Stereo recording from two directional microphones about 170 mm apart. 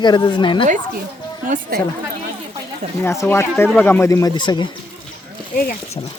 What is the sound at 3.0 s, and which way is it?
Speech, 15° left (ahead or behind).